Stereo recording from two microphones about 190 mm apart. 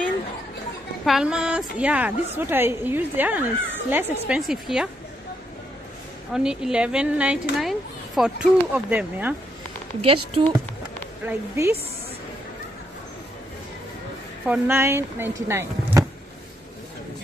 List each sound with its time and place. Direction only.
1.0 s speech: 5° right (ahead or behind)
6.3 s speech: 5° right (ahead or behind)
10.0 s speech: 30° right (ahead or behind)
11.2 s speech: 15° right (ahead or behind)
14.4 s speech: 10° right (ahead or behind)